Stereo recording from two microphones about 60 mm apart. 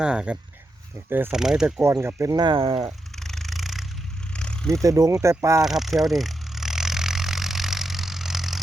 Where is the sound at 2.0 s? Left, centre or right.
Right.